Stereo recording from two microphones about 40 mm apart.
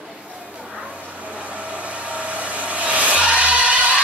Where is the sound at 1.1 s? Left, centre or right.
Right.